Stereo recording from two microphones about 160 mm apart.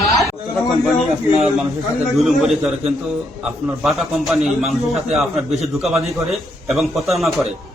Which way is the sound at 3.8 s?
Centre (ahead or behind).